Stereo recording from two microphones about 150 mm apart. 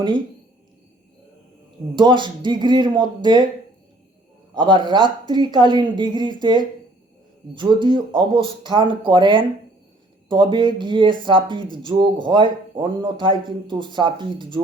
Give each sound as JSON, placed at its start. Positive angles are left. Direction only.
{"t": 2.0, "sound": "speech", "side_deg": -30}
{"t": 4.5, "sound": "speech", "side_deg": -30}